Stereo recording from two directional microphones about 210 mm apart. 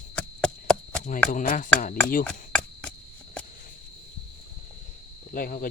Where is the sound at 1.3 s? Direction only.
40° left (ahead or behind).